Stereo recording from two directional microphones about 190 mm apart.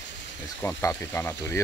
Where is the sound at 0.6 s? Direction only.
15° left (ahead or behind).